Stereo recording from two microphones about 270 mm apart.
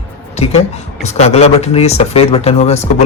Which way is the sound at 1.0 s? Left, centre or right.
Left.